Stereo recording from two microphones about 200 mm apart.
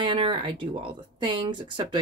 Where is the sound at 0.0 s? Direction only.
25° right (ahead or behind).